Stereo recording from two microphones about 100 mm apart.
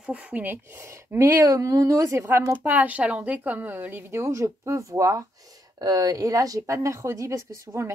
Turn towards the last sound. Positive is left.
turn(degrees=-30)  # may be behind; listen again after turning